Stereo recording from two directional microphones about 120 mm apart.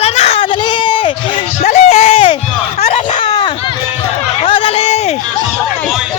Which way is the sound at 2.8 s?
65° left (ahead or behind).